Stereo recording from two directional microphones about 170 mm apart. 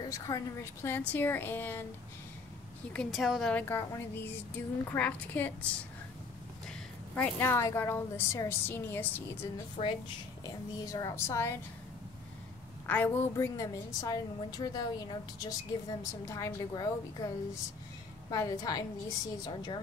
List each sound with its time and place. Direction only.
0.0 s a woman's voice: 20° left (ahead or behind)
2.9 s a woman's voice: 5° left (ahead or behind)
7.2 s a woman's voice: 10° left (ahead or behind)
9.8 s a woman's voice: 35° left (ahead or behind)
10.4 s a woman's voice: 20° left (ahead or behind)
12.8 s a woman's voice: 10° left (ahead or behind)
18.3 s a woman's voice: 20° left (ahead or behind)